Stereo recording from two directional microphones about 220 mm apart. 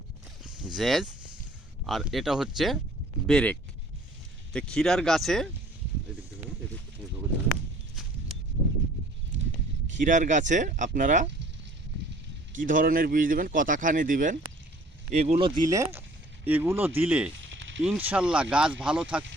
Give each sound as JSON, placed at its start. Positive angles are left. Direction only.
{"t": 0.4, "sound": "speech", "side_deg": -5}
{"t": 10.0, "sound": "speech", "side_deg": -35}
{"t": 12.5, "sound": "speech", "side_deg": -40}
{"t": 17.5, "sound": "a sound", "side_deg": -60}
{"t": 17.8, "sound": "speech", "side_deg": -5}